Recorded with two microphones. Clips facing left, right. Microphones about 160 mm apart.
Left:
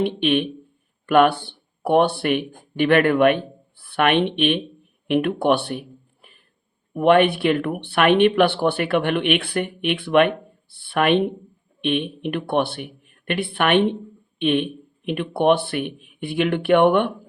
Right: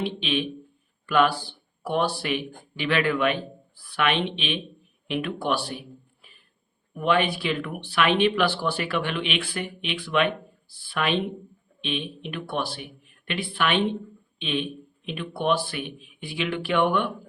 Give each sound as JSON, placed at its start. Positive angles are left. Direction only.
{"t": 0.0, "sound": "speech", "side_deg": 60}
{"t": 6.9, "sound": "speech", "side_deg": 60}